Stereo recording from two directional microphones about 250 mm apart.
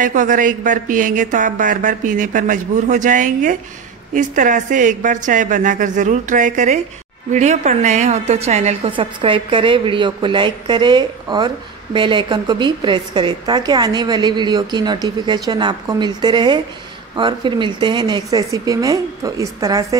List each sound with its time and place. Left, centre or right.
0.0 s a woman's voice: right; by 20.0 s centre